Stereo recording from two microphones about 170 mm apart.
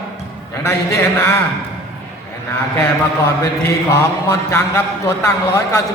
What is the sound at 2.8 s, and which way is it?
A man's voice, 15° left (ahead or behind).